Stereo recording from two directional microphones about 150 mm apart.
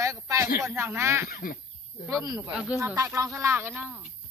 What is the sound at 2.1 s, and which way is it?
Speech, 20° right (ahead or behind).